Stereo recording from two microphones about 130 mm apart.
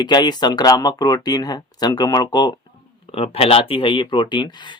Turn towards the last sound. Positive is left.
turn(degrees=35)  # may be behind; listen again after turning